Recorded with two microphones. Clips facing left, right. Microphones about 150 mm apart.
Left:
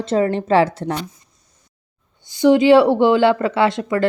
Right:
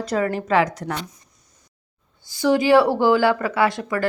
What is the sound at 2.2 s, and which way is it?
A woman's voice, 20° left (ahead or behind).